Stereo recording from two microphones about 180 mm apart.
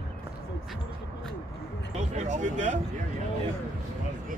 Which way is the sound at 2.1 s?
40° right (ahead or behind).